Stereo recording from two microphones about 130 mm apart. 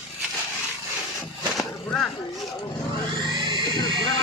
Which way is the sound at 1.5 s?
5° left (ahead or behind).